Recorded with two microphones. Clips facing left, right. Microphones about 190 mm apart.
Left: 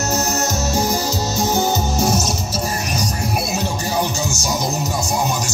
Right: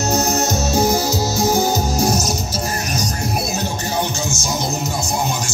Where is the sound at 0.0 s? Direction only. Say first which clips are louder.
Right 2 dB; 10° right (ahead or behind).